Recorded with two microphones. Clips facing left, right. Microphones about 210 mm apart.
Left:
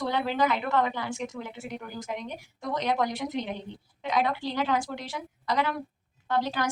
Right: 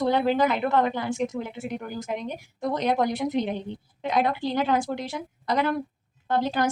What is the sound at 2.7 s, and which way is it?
A woman's voice, 50° right (ahead or behind).